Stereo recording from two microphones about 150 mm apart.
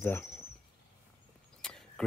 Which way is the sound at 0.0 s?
15° left (ahead or behind).